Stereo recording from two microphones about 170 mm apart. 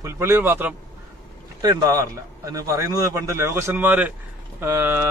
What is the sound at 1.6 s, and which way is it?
A man's voice, 20° right (ahead or behind).